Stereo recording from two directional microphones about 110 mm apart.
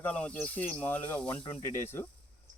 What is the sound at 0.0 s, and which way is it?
Speech, 10° left (ahead or behind).